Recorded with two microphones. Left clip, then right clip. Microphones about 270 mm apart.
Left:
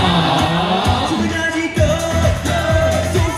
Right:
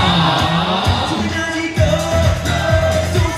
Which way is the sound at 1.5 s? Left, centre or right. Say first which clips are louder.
Even; centre.